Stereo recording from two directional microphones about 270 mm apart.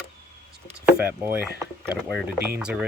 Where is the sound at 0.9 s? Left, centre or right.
Centre.